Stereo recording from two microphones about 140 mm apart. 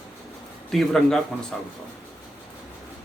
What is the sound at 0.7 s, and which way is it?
Speech, centre (ahead or behind).